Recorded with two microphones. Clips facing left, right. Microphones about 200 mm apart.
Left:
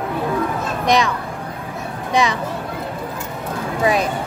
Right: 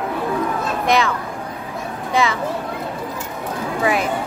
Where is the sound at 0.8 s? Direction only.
15° left (ahead or behind).